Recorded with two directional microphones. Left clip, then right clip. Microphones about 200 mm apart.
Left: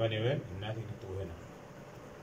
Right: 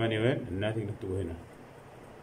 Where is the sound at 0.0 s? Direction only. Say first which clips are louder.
Right 4 dB; 40° right (ahead or behind).